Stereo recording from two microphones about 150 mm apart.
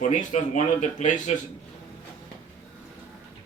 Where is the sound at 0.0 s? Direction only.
55° left (ahead or behind).